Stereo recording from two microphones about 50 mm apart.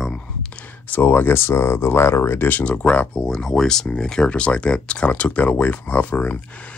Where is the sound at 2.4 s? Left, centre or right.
Left.